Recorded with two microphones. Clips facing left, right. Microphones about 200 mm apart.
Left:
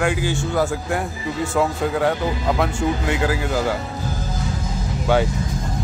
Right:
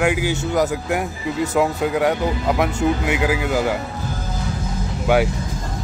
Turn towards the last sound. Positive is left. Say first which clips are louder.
# right 1 dB
turn(degrees=-15)  # may be behind; listen again after turning